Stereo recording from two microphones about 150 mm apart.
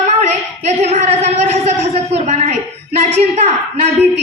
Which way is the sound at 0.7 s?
50° right (ahead or behind).